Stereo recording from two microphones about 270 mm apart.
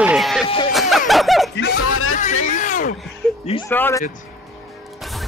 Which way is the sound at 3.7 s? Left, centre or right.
Centre.